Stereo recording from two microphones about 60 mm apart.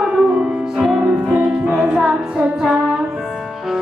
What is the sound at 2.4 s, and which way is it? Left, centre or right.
Music, centre.